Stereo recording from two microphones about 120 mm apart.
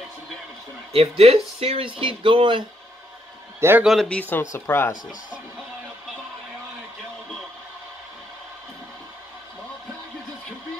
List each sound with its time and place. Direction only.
0.9 s speech: 55° right (ahead or behind)
3.8 s speech: centre (ahead or behind); by 4.9 s 20° left (ahead or behind)